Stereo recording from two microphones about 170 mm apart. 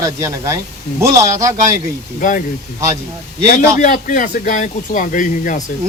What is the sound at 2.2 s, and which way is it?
Speech, 50° left (ahead or behind).